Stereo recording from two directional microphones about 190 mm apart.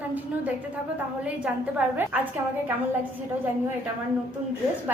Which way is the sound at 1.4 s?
5° right (ahead or behind).